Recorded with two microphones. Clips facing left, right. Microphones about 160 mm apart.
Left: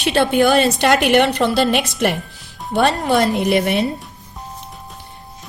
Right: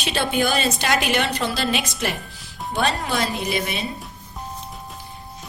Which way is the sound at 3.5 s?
70° left (ahead or behind).